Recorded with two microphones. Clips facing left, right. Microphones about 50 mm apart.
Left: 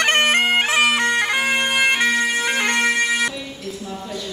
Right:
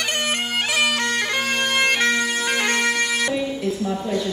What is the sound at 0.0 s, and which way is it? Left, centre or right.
Bagpipes, left.